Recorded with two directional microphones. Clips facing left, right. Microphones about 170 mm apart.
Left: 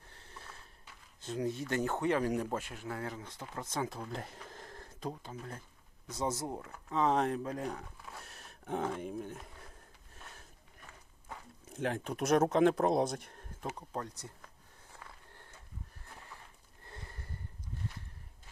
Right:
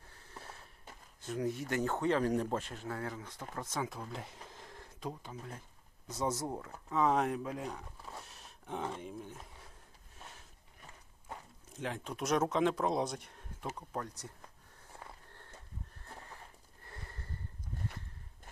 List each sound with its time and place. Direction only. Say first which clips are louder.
0.9 s a sound: right 5 dB; 50° right (ahead or behind)
1.2 s speech: even; 25° left (ahead or behind)
1.7 s speech: even; 15° left (ahead or behind)
4.2 s a sound: left 2 dB; 50° left (ahead or behind)
6.1 s speech: even; 10° left (ahead or behind)
6.9 s speech: even; 25° left (ahead or behind); by 7.7 s 40° left (ahead or behind)
8.2 s gasp: left 2 dB; 60° left (ahead or behind)
9.0 s speech: left 5 dB; 55° left (ahead or behind)
11.7 s speech: left 5 dB; 55° left (ahead or behind)
13.7 s speech: even; 15° left (ahead or behind)
16.8 s sniff: even; 15° left (ahead or behind)